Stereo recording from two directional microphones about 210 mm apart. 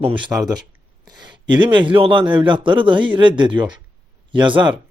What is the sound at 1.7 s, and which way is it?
A man's voice, 25° right (ahead or behind).